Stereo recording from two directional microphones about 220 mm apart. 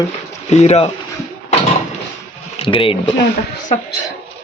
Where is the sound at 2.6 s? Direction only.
25° left (ahead or behind).